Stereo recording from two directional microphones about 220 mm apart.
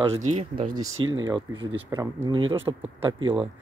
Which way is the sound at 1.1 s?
20° right (ahead or behind).